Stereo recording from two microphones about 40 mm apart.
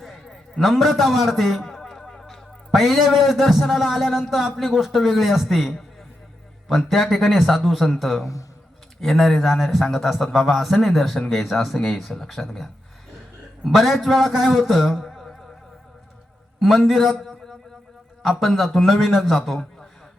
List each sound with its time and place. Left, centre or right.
0.6 s a man's voice: centre
2.0 s a sound: centre
2.7 s a man's voice: centre
14.8 s a sound: centre
15.0 s music: centre
16.6 s a man's voice: centre